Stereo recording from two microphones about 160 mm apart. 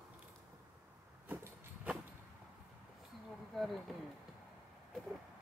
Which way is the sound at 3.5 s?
Centre (ahead or behind).